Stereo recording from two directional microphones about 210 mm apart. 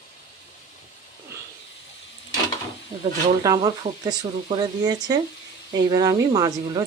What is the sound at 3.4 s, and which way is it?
Speech, 20° right (ahead or behind).